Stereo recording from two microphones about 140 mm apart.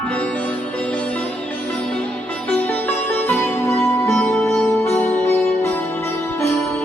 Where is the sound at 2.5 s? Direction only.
10° left (ahead or behind).